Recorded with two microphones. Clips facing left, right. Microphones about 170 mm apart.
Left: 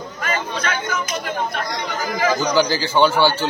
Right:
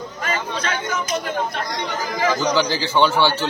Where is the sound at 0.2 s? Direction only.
30° right (ahead or behind).